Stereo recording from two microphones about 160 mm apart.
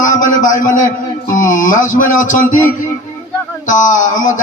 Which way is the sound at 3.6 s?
50° left (ahead or behind).